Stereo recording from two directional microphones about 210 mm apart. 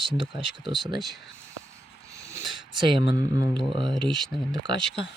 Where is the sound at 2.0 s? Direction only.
15° right (ahead or behind).